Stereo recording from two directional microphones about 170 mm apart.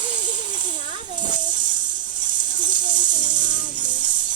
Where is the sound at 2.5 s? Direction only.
50° right (ahead or behind).